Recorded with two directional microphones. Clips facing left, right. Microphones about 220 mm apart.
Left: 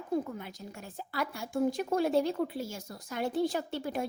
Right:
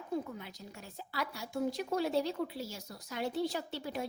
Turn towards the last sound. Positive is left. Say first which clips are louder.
# left 4 dB
turn(degrees=50)  # may be behind; listen again after turning